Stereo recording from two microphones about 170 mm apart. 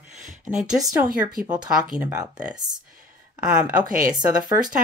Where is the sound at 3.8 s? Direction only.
55° right (ahead or behind).